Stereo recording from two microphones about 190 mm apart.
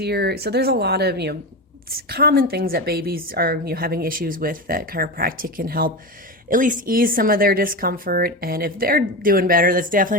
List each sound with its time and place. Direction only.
0.0 s a woman's voice: 60° right (ahead or behind)